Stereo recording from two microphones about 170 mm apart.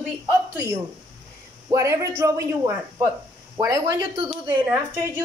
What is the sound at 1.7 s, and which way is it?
A man's voice, 15° right (ahead or behind).